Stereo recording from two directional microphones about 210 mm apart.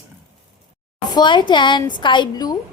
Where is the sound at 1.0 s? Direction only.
20° left (ahead or behind).